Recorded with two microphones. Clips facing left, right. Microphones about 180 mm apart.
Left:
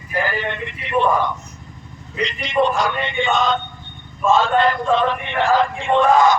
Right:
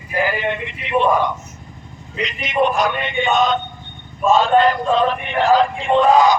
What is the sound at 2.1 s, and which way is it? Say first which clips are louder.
Speech: even; 20° right (ahead or behind).